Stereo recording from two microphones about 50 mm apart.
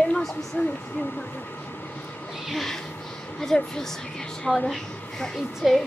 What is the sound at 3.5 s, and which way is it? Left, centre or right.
A woman's voice, centre.